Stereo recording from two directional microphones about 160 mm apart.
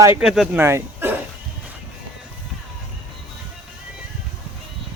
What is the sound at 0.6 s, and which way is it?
Dog, 15° right (ahead or behind).